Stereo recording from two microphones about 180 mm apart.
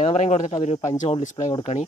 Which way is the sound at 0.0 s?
35° left (ahead or behind).